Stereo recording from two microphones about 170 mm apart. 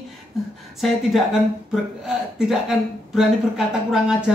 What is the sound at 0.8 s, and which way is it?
Mantra, centre (ahead or behind).